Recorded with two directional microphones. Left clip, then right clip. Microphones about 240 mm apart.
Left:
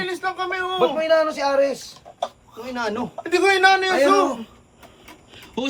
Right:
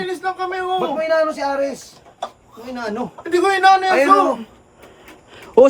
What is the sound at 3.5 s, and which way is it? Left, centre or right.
Speech, centre.